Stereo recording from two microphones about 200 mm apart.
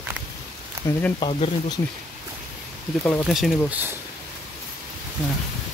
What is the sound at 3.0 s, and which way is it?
Speech, 5° left (ahead or behind).